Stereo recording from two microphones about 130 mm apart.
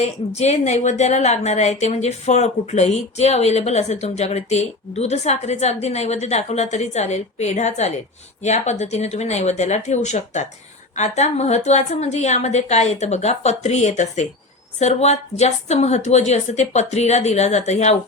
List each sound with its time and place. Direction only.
0.0 s a woman's voice: 60° left (ahead or behind)